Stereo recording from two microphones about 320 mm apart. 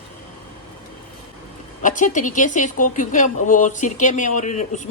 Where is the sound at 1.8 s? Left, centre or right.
Left.